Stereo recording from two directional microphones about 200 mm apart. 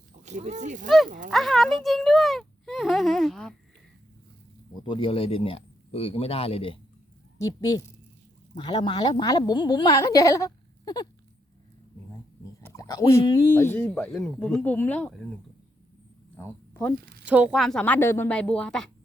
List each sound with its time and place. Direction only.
0.2 s speech: 35° right (ahead or behind)
0.9 s a woman's voice: centre (ahead or behind)
1.3 s a sound: centre (ahead or behind)
4.7 s a woman's voice: 25° left (ahead or behind)
7.4 s a woman's voice: 20° left (ahead or behind)
12.6 s speech: 15° left (ahead or behind)
16.4 s speech: 10° left (ahead or behind)
17.2 s a woman's voice: 5° right (ahead or behind)